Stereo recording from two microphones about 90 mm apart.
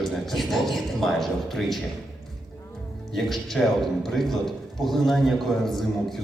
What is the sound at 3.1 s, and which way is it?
A man's voice, 5° left (ahead or behind).